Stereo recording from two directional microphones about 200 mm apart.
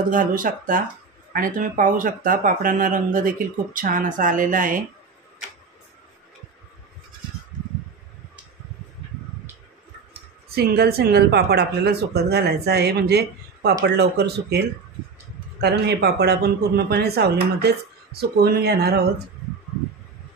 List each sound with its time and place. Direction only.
0.1 s speech: 45° right (ahead or behind)
10.5 s speech: 50° right (ahead or behind)
15.6 s speech: 55° right (ahead or behind)